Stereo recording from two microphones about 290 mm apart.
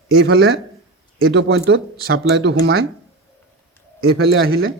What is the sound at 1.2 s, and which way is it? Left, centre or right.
Speech, right.